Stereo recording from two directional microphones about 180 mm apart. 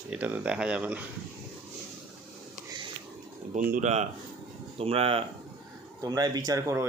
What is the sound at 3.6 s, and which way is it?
Speech, 50° right (ahead or behind).